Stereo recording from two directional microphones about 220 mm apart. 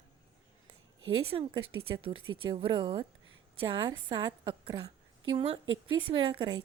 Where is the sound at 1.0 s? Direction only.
65° right (ahead or behind).